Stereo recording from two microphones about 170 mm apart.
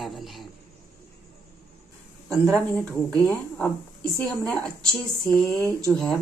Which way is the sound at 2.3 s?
Centre (ahead or behind).